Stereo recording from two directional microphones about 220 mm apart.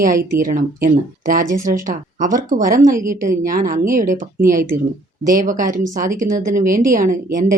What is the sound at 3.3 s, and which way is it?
Speech, 40° right (ahead or behind).